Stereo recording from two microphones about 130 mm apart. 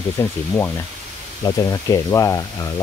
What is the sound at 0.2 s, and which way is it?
Speech, 20° left (ahead or behind).